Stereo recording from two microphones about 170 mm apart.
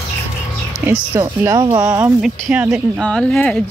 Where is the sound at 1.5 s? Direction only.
25° right (ahead or behind).